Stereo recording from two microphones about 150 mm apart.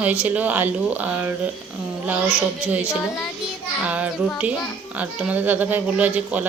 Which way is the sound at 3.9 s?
10° right (ahead or behind).